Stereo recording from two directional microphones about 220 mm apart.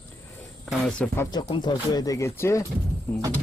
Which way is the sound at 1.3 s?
20° left (ahead or behind).